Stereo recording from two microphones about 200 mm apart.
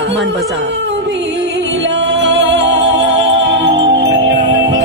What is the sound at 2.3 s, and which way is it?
Music, 60° right (ahead or behind).